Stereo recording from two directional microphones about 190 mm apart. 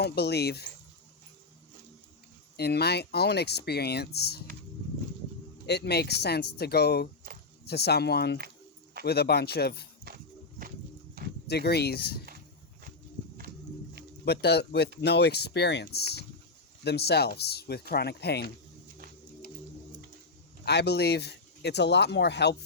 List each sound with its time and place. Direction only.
0.0 s speech: 60° left (ahead or behind)
2.6 s speech: 60° left (ahead or behind)
5.6 s speech: 60° left (ahead or behind)
10.1 s walk: 60° right (ahead or behind)
11.4 s speech: 60° left (ahead or behind)
14.3 s speech: 60° left (ahead or behind)
20.7 s speech: 60° left (ahead or behind)